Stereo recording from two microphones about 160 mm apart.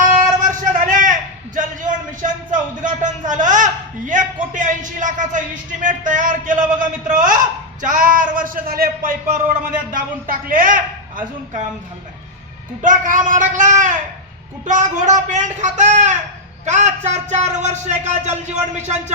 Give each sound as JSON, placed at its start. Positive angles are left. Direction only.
{"t": 0.0, "sound": "a sound", "side_deg": -55}
{"t": 5.8, "sound": "a man's voice", "side_deg": -55}
{"t": 12.8, "sound": "speech", "side_deg": -55}